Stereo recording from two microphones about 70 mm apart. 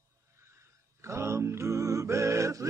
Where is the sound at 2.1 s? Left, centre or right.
Right.